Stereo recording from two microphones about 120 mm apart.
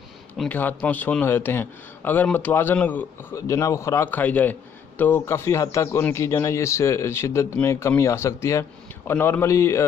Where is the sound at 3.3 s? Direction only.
25° left (ahead or behind).